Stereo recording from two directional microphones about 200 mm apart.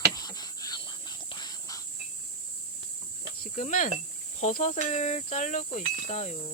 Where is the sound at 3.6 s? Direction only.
35° left (ahead or behind).